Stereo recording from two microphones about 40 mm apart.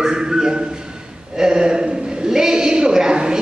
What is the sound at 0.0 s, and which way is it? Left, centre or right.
A man's voice, centre.